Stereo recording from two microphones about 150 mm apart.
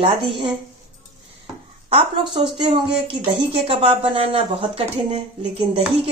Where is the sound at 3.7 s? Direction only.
35° right (ahead or behind).